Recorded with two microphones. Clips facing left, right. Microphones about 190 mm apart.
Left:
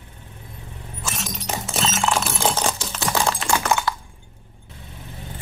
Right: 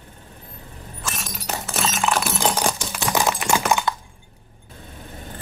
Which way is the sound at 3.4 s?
15° right (ahead or behind).